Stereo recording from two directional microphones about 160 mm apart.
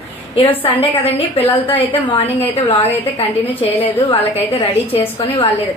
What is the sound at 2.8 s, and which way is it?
A woman's voice, 40° left (ahead or behind).